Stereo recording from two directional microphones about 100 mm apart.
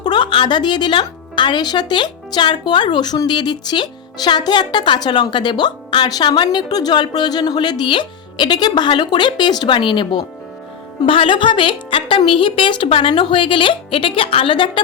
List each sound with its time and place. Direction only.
0.0 s a woman's voice: 50° left (ahead or behind)